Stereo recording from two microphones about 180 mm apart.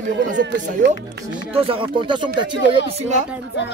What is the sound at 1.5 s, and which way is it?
Speech, 30° right (ahead or behind).